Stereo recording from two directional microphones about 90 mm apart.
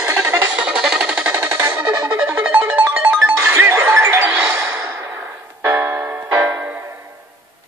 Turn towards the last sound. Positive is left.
turn(degrees=-25)  # may be behind; listen again after turning